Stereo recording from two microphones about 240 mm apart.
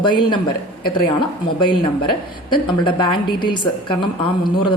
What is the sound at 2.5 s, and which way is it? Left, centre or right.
A woman's voice, centre.